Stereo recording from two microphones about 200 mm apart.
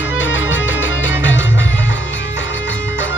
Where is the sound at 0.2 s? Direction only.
70° left (ahead or behind).